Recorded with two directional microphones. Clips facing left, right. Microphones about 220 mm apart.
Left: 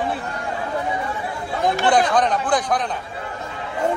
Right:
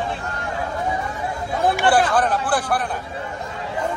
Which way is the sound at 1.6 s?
5° right (ahead or behind).